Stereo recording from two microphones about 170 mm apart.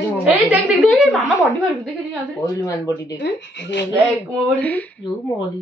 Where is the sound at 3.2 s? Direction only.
85° left.